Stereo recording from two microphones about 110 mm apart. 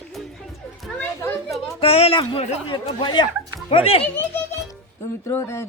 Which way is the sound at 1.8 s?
65° left (ahead or behind).